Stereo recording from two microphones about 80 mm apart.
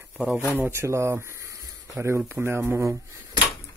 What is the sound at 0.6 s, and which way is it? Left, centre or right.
Speech, right.